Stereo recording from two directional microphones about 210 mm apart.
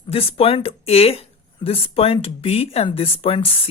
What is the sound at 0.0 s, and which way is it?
Speech, 25° left (ahead or behind).